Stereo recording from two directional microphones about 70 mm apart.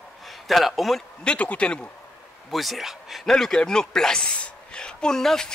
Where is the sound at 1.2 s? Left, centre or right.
Centre.